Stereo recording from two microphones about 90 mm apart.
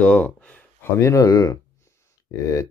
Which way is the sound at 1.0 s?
35° left (ahead or behind).